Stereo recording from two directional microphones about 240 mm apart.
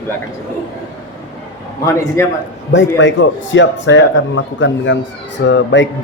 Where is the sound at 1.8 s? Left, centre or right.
Centre.